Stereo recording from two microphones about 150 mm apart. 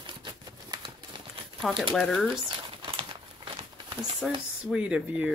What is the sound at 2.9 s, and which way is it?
Crumpling, 35° right (ahead or behind).